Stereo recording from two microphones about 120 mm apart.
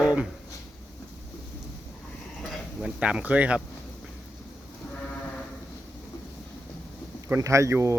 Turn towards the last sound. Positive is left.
turn(degrees=-25)  # may be behind; listen again after turning